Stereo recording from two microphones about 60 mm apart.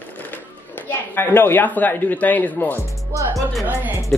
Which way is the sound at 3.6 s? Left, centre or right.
Right.